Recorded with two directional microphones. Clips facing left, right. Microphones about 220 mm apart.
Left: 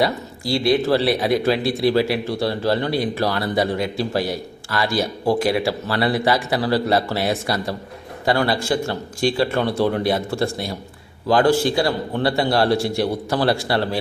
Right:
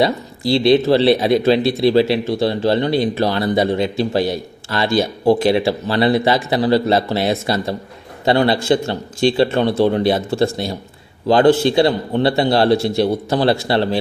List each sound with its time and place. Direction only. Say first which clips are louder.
0.0 s speech: right 4 dB; 25° right (ahead or behind)